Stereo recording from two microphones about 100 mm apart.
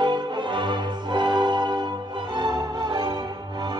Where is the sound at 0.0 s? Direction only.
50° right (ahead or behind).